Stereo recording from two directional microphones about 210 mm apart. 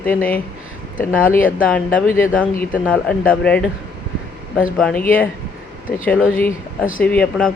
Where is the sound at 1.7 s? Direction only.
5° left (ahead or behind).